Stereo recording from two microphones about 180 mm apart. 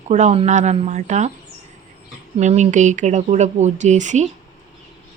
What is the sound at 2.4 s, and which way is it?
A woman's voice, 40° right (ahead or behind).